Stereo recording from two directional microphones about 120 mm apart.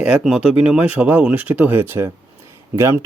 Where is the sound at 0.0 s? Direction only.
10° right (ahead or behind).